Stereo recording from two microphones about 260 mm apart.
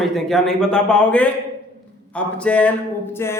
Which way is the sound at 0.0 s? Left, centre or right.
Centre.